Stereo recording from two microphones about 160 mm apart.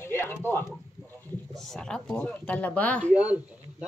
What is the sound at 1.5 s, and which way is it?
Speech, centre (ahead or behind).